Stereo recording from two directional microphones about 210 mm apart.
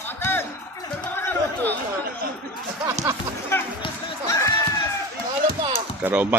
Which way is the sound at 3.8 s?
15° left (ahead or behind).